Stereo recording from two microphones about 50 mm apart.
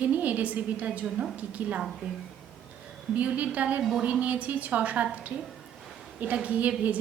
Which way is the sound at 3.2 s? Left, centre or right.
Right.